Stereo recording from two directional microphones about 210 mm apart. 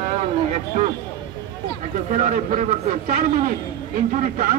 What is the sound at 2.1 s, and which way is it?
Speech, 35° right (ahead or behind).